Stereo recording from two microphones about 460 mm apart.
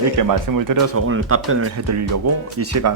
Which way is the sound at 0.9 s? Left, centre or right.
Right.